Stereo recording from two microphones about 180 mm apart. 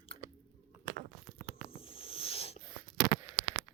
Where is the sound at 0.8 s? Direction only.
65° right (ahead or behind).